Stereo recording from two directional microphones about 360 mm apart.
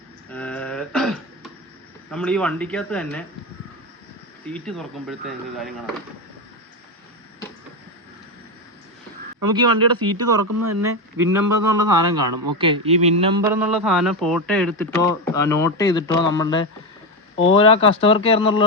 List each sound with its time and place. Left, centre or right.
0.3 s throat clearing: centre
2.0 s a man's voice: centre
4.5 s a man's voice: centre
9.5 s speech: right
10.4 s speech: right
10.8 s a man's voice: centre